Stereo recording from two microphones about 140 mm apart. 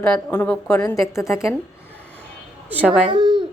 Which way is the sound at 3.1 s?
35° right (ahead or behind).